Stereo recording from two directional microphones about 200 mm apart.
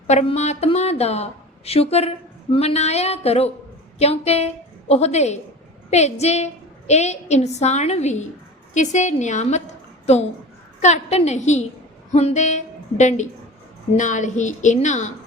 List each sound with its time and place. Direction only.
0.1 s a woman's voice: 35° left (ahead or behind)
10.8 s a woman's voice: 35° left (ahead or behind)